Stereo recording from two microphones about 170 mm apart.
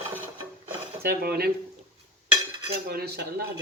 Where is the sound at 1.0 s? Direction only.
65° right (ahead or behind).